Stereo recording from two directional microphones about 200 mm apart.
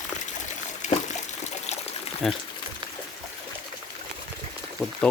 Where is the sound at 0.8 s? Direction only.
35° left (ahead or behind).